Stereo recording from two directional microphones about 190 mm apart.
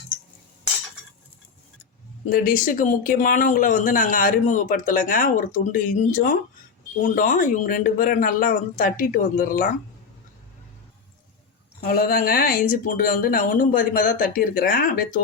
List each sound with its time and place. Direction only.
2.3 s speech: 45° left (ahead or behind)
11.8 s speech: 50° left (ahead or behind)